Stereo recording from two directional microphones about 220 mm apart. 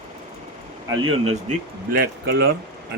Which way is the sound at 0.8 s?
25° right (ahead or behind).